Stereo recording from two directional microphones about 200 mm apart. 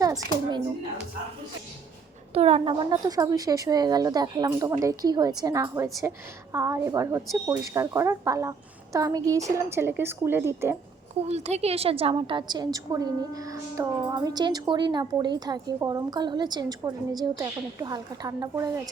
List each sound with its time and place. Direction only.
0.0 s speech: 15° right (ahead or behind)
2.3 s speech: 30° right (ahead or behind); by 10.8 s 10° right (ahead or behind)
11.2 s a woman's voice: 30° right (ahead or behind); by 18.7 s 15° right (ahead or behind)